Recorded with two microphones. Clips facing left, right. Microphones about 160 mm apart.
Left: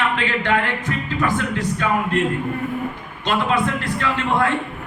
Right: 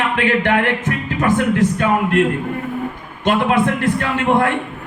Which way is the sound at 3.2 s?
60° right (ahead or behind).